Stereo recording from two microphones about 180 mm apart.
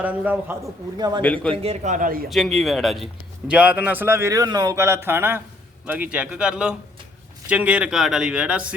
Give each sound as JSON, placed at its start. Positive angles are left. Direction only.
{"t": 0.0, "sound": "a man's voice", "side_deg": -10}
{"t": 0.9, "sound": "a man's voice", "side_deg": -20}
{"t": 1.2, "sound": "a man's voice", "side_deg": 5}
{"t": 1.6, "sound": "speech", "side_deg": -40}
{"t": 2.3, "sound": "a man's voice", "side_deg": 0}